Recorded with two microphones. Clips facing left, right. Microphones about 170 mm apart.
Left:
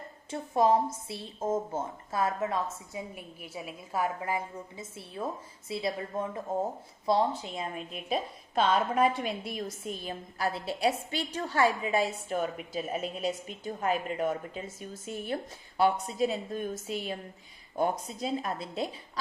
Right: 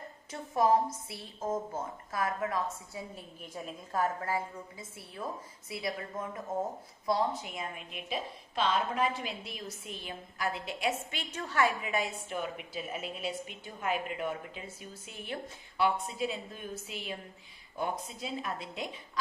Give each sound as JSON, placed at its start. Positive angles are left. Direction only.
{"t": 0.3, "sound": "a woman's voice", "side_deg": 25}